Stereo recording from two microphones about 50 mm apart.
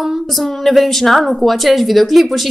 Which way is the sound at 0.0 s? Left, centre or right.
Centre.